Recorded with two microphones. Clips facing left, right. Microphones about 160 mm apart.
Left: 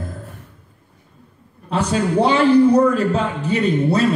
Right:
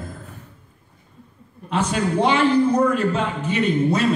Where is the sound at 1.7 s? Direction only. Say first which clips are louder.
Left 2 dB; 35° left (ahead or behind).